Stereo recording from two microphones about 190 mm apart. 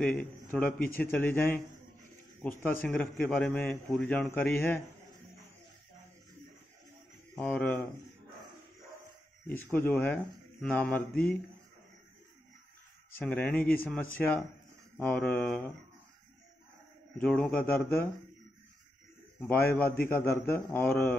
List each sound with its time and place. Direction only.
0.0 s a man's voice: 5° left (ahead or behind)
7.3 s a man's voice: 5° left (ahead or behind)
9.5 s a man's voice: 10° left (ahead or behind)
13.1 s a man's voice: 10° left (ahead or behind)
17.2 s a man's voice: 5° left (ahead or behind)
19.4 s a man's voice: 10° left (ahead or behind)